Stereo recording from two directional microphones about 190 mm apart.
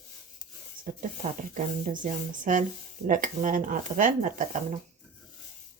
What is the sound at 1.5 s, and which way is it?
Speech, 40° right (ahead or behind).